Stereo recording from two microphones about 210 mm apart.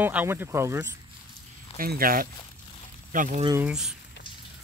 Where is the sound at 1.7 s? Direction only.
45° right (ahead or behind).